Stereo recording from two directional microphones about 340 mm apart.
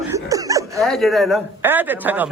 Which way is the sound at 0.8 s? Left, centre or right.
Centre.